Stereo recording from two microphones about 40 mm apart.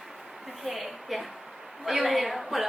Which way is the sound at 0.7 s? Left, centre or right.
Centre.